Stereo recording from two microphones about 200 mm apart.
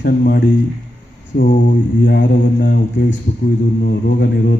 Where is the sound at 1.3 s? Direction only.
40° left (ahead or behind).